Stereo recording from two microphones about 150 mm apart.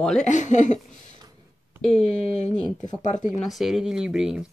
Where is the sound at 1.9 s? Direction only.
45° left (ahead or behind).